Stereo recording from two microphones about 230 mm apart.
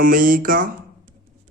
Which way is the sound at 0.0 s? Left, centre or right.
Right.